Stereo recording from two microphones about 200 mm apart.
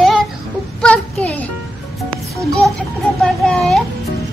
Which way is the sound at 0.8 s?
5° left (ahead or behind).